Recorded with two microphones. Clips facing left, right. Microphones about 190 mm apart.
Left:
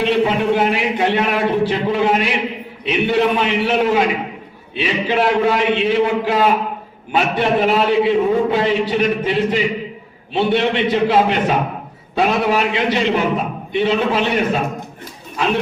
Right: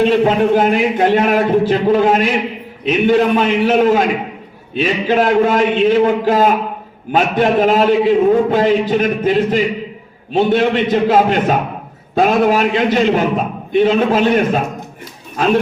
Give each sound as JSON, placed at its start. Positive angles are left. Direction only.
{"t": 0.3, "sound": "a man's voice", "side_deg": -45}